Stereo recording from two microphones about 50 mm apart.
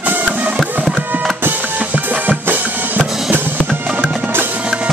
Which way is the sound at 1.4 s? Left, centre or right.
Right.